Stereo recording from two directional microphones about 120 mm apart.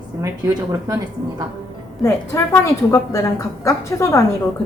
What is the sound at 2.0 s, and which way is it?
Speech, 20° left (ahead or behind).